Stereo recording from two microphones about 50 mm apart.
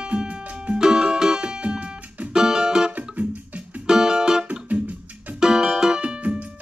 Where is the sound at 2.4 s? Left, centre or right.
Centre.